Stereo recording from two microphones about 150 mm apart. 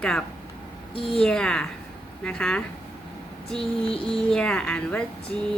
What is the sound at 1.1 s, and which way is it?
A woman's voice, 5° left (ahead or behind).